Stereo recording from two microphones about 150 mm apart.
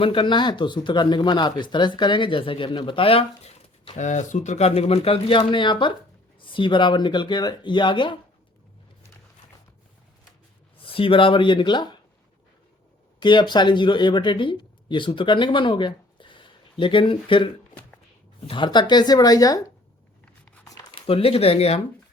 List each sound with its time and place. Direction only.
0.0 s speech: 35° left (ahead or behind)
10.8 s speech: 35° left (ahead or behind)
13.1 s speech: 30° left (ahead or behind)
20.2 s biting: 10° left (ahead or behind)
20.9 s speech: 40° left (ahead or behind)